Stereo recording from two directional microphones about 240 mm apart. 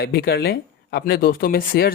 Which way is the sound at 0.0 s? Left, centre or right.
Left.